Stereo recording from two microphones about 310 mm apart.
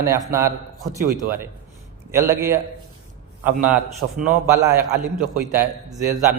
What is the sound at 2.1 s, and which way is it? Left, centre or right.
A man's voice, centre.